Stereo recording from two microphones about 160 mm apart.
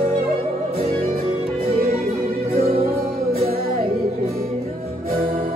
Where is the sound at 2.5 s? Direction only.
40° right (ahead or behind).